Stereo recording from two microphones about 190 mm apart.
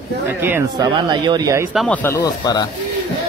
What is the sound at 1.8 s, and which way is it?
Speech, 10° left (ahead or behind).